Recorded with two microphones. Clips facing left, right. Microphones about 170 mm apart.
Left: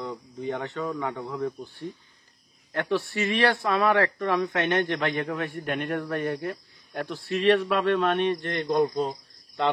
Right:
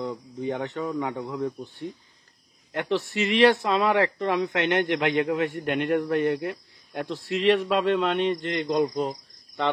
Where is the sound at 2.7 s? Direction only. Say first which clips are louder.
Right 1 dB; 20° right (ahead or behind).